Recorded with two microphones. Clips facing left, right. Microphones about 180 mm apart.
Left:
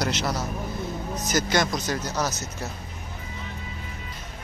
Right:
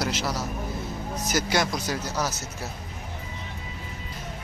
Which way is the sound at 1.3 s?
10° right (ahead or behind).